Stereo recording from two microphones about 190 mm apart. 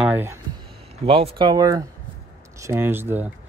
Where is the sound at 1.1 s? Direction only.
30° right (ahead or behind).